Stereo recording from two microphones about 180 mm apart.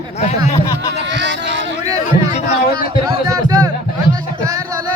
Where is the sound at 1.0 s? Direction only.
80° right.